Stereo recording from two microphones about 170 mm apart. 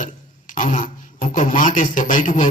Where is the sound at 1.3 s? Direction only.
50° left (ahead or behind).